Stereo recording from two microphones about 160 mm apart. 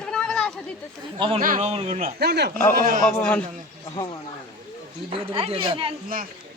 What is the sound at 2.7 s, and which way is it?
Speech, 60° right (ahead or behind).